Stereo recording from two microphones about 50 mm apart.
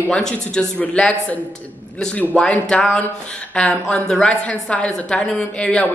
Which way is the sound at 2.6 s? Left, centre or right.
Centre.